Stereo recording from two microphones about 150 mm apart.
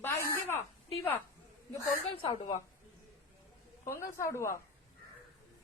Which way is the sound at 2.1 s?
30° left (ahead or behind).